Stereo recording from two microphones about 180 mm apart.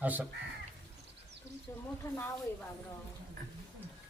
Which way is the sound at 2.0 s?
15° left (ahead or behind).